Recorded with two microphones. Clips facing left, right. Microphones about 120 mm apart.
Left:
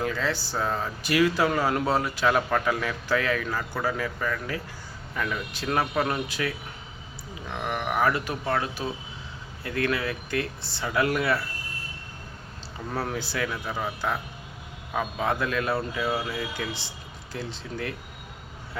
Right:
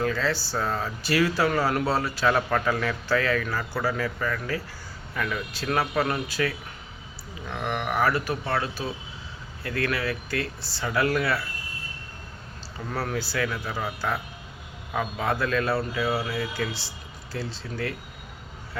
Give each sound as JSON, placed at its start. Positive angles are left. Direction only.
{"t": 0.0, "sound": "speech", "side_deg": 15}
{"t": 5.8, "sound": "speech", "side_deg": 5}
{"t": 6.2, "sound": "speech", "side_deg": 20}
{"t": 7.5, "sound": "speech", "side_deg": 5}
{"t": 8.0, "sound": "speech", "side_deg": 20}
{"t": 9.6, "sound": "speech", "side_deg": 20}
{"t": 12.9, "sound": "speech", "side_deg": 20}
{"t": 14.9, "sound": "speech", "side_deg": 15}
{"t": 15.7, "sound": "speech", "side_deg": 0}
{"t": 16.6, "sound": "speech", "side_deg": 20}